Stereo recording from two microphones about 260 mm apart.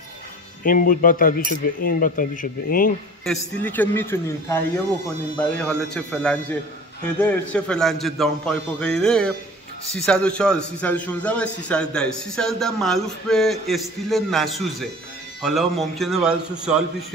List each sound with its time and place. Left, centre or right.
0.7 s speech: left
3.3 s a man's voice: centre
5.6 s a man's voice: centre